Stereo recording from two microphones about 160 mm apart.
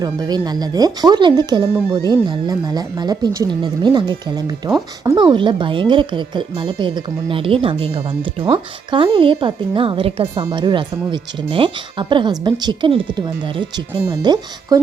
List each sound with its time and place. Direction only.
0.0 s a woman's voice: 25° right (ahead or behind)